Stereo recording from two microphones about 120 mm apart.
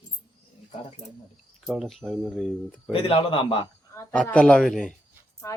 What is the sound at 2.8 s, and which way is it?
Speech, 45° left (ahead or behind).